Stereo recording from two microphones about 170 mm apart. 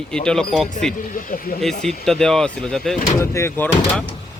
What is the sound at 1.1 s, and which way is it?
Speech, 55° left (ahead or behind).